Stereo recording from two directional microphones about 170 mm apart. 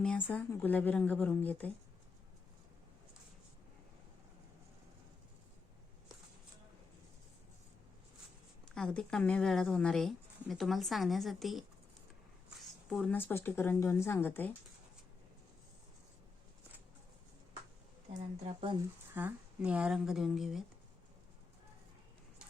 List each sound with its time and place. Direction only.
0.0 s speech: 5° left (ahead or behind)
8.7 s speech: 5° left (ahead or behind)
12.9 s speech: centre (ahead or behind)
18.4 s speech: 30° right (ahead or behind)
19.1 s speech: 10° right (ahead or behind)